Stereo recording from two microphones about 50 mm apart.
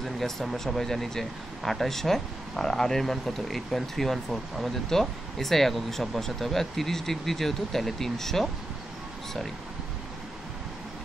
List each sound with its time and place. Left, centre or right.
0.0 s speech: centre